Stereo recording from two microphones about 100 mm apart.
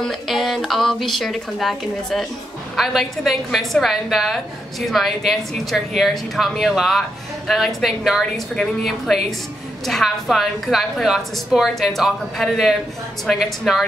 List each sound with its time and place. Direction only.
0.1 s a woman's voice: centre (ahead or behind)